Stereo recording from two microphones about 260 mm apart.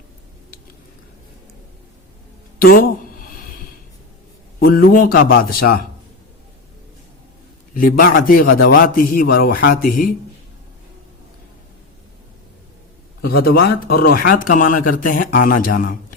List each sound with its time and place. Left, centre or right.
2.6 s a sound: left
4.6 s speech: left
7.7 s speech: left
13.2 s speech: left